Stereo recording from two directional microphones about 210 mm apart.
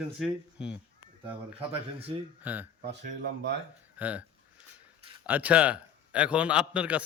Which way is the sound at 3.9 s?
5° right (ahead or behind).